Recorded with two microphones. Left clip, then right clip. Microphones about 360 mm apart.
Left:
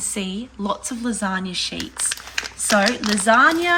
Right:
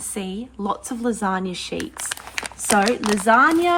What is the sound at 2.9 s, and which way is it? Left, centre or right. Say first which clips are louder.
Speech: right 1 dB; right.